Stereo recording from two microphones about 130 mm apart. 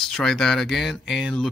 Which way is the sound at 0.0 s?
5° left (ahead or behind).